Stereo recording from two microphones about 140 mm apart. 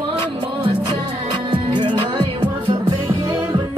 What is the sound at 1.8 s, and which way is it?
Music, 35° right (ahead or behind).